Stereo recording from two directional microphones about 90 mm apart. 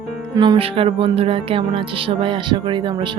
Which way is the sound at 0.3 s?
55° right (ahead or behind).